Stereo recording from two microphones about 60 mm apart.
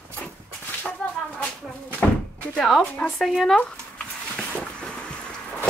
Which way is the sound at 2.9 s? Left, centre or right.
Left.